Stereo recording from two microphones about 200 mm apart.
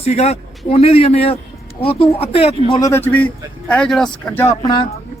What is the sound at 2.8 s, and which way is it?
Speech, 15° left (ahead or behind).